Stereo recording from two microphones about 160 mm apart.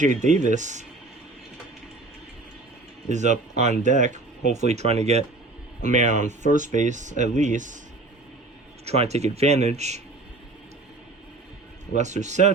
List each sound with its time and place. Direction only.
0.0 s speech: 50° right (ahead or behind)
3.1 s speech: 50° right (ahead or behind)
8.8 s speech: 40° right (ahead or behind)
11.9 s speech: 45° right (ahead or behind)